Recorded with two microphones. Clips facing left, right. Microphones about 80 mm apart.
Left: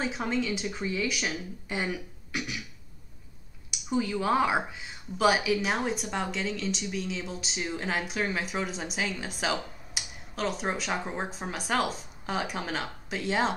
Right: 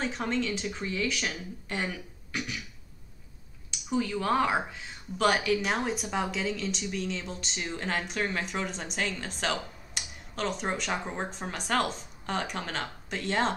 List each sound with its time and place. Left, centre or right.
0.0 s speech: centre
3.7 s speech: centre